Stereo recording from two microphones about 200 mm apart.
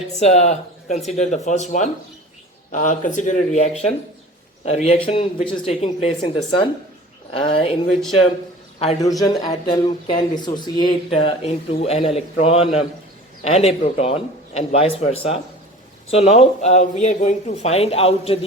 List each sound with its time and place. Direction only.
0.2 s speech: 35° left (ahead or behind)
9.2 s speech: 20° left (ahead or behind)